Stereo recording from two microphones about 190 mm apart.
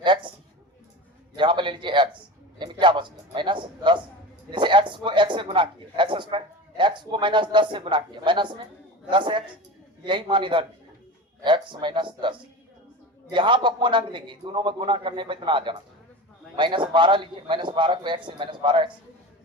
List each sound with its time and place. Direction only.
0.0 s speech: 25° right (ahead or behind)
1.4 s a sound: 25° right (ahead or behind)
9.0 s a man's voice: 25° right (ahead or behind)